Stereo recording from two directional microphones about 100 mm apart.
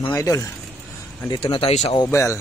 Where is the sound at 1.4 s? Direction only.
70° left (ahead or behind).